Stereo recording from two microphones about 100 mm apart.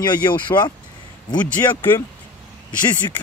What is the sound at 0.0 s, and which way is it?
Speech, 45° left (ahead or behind).